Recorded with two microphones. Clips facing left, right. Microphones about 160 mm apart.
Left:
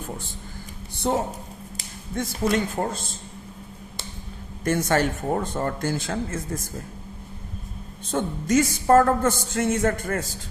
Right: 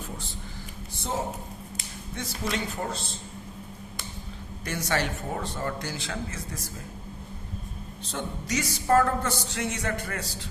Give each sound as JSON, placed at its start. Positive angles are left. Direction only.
{"t": 0.9, "sound": "a man's voice", "side_deg": 65}
{"t": 2.1, "sound": "speech", "side_deg": 50}
{"t": 4.6, "sound": "speech", "side_deg": 50}
{"t": 8.1, "sound": "speech", "side_deg": 50}